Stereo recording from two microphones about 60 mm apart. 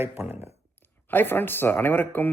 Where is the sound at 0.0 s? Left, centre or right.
Right.